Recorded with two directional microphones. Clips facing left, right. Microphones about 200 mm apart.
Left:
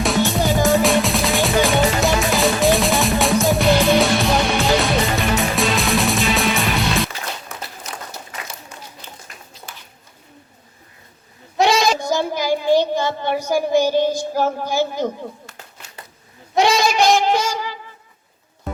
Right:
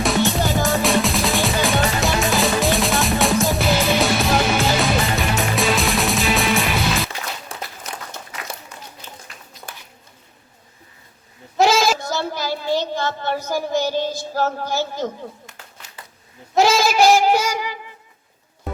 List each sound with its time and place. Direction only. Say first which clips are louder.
0.0 s music: left 1 dB; centre (ahead or behind)
7.5 s a sound: right 1 dB; 30° right (ahead or behind)
11.5 s goat: even; centre (ahead or behind)
11.9 s child singing: left 4 dB; 15° left (ahead or behind)
16.6 s goat: right 1 dB; centre (ahead or behind)